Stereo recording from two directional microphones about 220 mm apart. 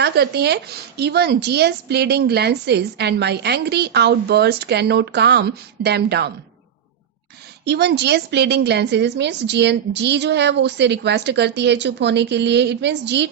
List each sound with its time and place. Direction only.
0.0 s a woman's voice: 50° right (ahead or behind)
7.6 s a woman's voice: 50° right (ahead or behind)